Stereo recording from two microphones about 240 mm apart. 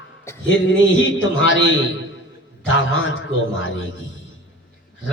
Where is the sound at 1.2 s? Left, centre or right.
Left.